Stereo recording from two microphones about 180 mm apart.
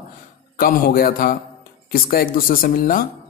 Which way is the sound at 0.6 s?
55° left (ahead or behind).